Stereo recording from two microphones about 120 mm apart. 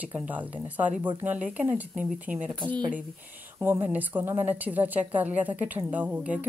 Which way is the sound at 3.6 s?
15° right (ahead or behind).